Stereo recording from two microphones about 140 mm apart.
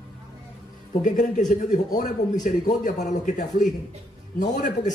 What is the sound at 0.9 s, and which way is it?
A man's voice, 65° left (ahead or behind).